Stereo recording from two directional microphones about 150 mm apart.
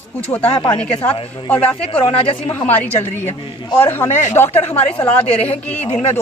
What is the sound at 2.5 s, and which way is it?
Speech, 10° left (ahead or behind).